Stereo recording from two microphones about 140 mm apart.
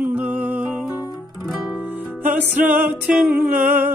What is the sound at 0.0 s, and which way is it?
Music, 10° right (ahead or behind).